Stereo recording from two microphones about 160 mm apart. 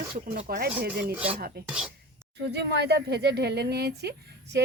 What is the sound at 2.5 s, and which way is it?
Speech, 90° right.